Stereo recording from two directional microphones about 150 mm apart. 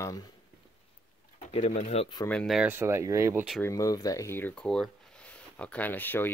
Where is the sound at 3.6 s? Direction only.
25° left (ahead or behind).